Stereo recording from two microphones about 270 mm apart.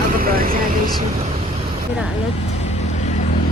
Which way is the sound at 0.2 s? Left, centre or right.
Right.